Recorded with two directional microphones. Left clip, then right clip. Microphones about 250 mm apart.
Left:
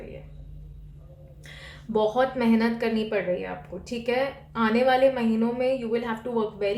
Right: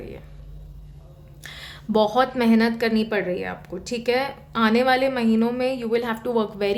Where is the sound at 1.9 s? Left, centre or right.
Right.